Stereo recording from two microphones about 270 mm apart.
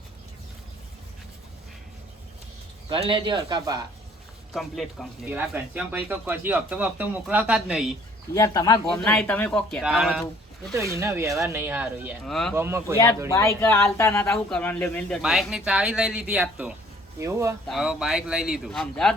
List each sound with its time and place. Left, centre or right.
2.9 s speech: centre
4.5 s speech: centre
8.4 s speech: centre
12.5 s speech: centre
13.3 s speech: centre